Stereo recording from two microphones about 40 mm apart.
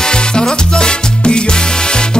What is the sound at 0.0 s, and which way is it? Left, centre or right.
Music, left.